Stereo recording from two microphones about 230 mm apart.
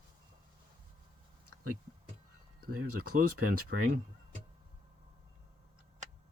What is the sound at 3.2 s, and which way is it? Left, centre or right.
Speech, right.